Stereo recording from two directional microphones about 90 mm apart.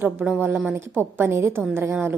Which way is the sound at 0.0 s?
20° right (ahead or behind).